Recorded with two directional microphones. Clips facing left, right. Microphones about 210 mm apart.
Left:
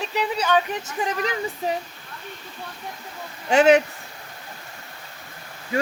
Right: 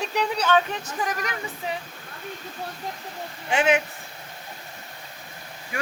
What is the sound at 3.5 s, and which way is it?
Speech, 40° left (ahead or behind).